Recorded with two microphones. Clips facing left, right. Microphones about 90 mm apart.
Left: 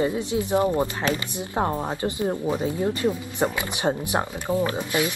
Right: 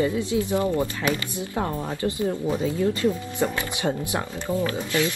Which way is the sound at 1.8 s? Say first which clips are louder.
Even; 20° left (ahead or behind).